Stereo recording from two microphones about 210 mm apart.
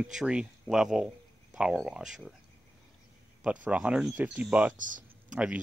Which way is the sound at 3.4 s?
5° right (ahead or behind).